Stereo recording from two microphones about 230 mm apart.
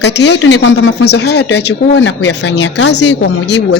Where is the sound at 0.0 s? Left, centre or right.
Left.